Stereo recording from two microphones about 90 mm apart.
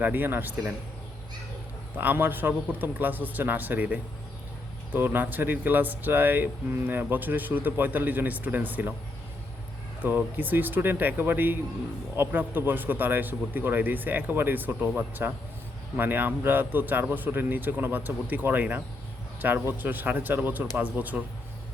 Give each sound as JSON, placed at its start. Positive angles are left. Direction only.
{"t": 0.0, "sound": "speech", "side_deg": -20}
{"t": 2.0, "sound": "speech", "side_deg": -20}
{"t": 10.0, "sound": "speech", "side_deg": -20}